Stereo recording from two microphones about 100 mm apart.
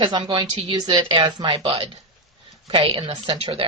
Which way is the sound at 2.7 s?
65° right (ahead or behind).